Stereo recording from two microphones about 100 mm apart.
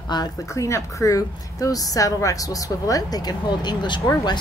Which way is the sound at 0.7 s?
30° left (ahead or behind).